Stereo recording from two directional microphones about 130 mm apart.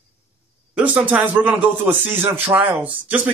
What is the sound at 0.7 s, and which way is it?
Speech, 10° right (ahead or behind).